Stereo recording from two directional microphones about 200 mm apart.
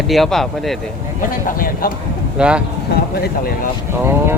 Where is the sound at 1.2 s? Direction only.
45° left (ahead or behind).